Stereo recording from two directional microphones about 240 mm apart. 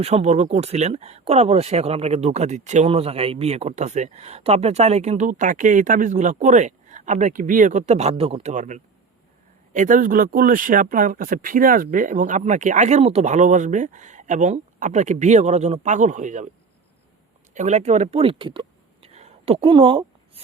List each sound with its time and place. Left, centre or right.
0.0 s speech: right
17.5 s speech: right
19.0 s a sound: right